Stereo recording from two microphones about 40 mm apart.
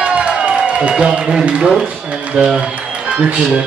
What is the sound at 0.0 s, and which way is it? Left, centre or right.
Run, right.